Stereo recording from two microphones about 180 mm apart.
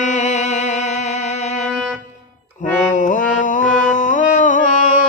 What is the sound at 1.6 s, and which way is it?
Music, centre (ahead or behind).